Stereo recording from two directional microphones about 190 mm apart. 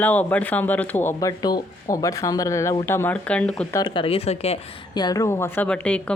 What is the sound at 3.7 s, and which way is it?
Speech, 25° left (ahead or behind).